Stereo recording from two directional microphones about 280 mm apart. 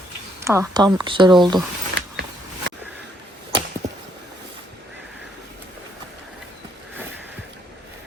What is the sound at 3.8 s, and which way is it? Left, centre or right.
Chop, right.